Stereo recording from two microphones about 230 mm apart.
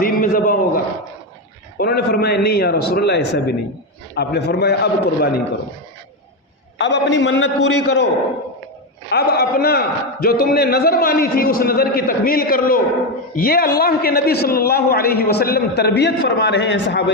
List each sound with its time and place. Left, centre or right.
0.0 s a sound: left
1.8 s a man's voice: left
6.7 s a man's voice: left
9.0 s a man's voice: left